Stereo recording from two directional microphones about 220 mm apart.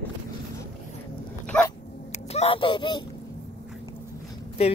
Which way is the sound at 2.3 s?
25° left (ahead or behind).